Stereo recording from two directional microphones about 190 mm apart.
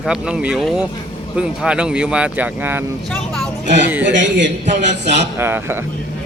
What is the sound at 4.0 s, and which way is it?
Speech, 75° right (ahead or behind).